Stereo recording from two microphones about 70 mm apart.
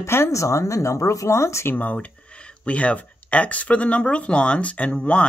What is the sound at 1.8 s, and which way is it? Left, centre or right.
Speech, left.